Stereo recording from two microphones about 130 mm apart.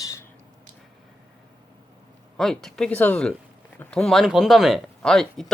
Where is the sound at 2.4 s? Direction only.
Centre (ahead or behind).